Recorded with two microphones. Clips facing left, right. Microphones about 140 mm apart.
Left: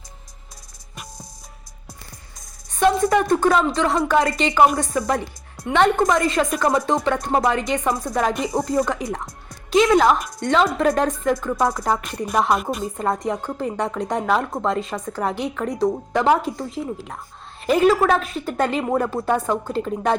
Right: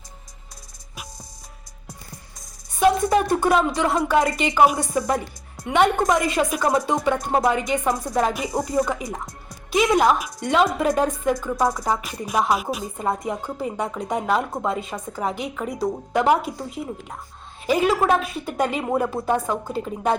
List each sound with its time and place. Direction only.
3.2 s a woman's voice: 10° right (ahead or behind)
9.8 s speech: 15° right (ahead or behind)
10.2 s a woman's voice: 5° right (ahead or behind)